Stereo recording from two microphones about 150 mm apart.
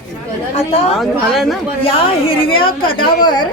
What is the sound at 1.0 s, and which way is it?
Speech, centre (ahead or behind).